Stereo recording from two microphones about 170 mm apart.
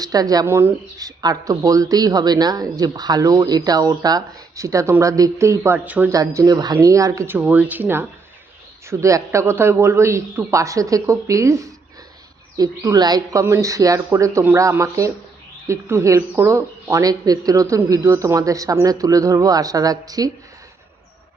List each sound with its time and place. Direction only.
0.0 s speech: 20° right (ahead or behind)
6.1 s a man's voice: 20° right (ahead or behind)